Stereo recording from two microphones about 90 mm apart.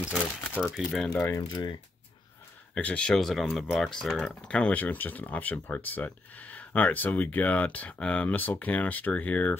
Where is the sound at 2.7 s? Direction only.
15° left (ahead or behind).